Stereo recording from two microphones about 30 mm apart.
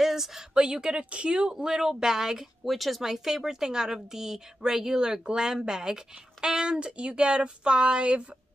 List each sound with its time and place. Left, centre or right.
0.0 s a sound: centre
0.7 s a woman's voice: right
1.6 s a woman's voice: right
2.6 s speech: centre
3.0 s speech: centre
4.9 s a woman's voice: right